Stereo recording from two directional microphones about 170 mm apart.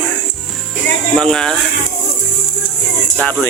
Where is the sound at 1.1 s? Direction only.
5° left (ahead or behind).